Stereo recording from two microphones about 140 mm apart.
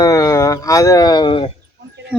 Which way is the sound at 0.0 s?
25° left (ahead or behind).